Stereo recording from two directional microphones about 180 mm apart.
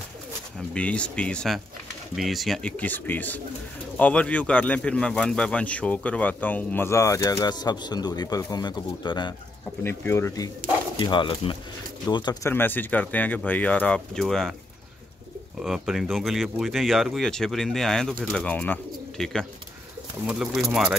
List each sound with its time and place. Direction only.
0.7 s speech: 5° left (ahead or behind); by 9.3 s 25° left (ahead or behind)
9.8 s speech: 15° left (ahead or behind)
12.4 s speech: 10° left (ahead or behind)
15.6 s speech: centre (ahead or behind)